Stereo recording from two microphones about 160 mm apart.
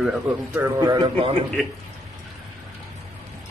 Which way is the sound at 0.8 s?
25° right (ahead or behind).